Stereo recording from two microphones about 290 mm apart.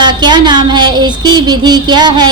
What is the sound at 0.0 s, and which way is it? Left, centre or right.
A woman's voice, centre.